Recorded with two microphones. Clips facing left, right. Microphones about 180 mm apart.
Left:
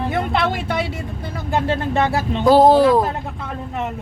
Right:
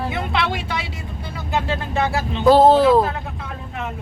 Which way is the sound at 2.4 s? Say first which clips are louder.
Even; 10° left (ahead or behind).